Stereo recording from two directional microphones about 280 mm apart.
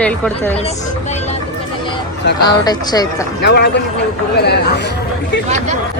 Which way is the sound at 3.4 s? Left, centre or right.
Left.